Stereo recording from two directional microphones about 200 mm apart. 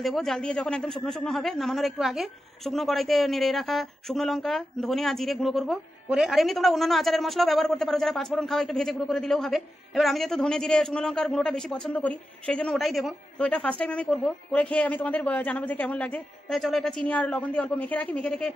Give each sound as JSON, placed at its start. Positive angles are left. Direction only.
{"t": 0.0, "sound": "a man's voice", "side_deg": 0}